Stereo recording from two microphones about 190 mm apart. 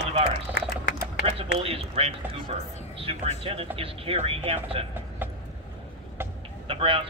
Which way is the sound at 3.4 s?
30° right (ahead or behind).